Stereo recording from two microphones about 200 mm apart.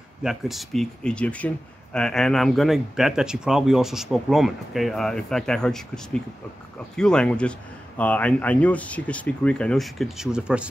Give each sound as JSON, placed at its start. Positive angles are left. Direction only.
{"t": 0.2, "sound": "speech", "side_deg": 0}